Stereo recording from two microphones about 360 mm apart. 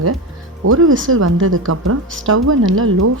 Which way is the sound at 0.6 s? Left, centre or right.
Right.